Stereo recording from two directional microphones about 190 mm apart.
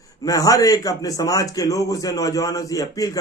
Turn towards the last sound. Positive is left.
turn(degrees=20)  # may be behind; listen again after turning